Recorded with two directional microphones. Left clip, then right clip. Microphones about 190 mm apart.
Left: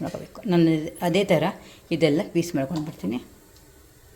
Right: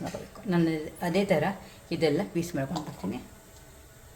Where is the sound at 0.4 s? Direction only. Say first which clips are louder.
Left 7 dB; 40° left (ahead or behind).